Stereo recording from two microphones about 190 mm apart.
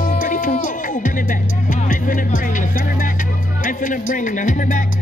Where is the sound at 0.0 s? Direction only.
45° left (ahead or behind).